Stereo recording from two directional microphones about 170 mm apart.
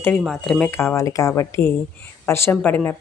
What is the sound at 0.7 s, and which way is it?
Speech, 15° left (ahead or behind).